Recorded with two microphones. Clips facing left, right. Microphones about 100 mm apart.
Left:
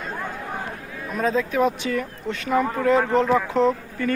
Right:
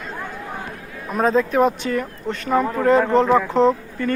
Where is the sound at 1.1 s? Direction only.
45° right (ahead or behind).